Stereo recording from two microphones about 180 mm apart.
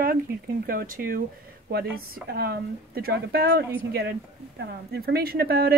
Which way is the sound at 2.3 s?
60° right (ahead or behind).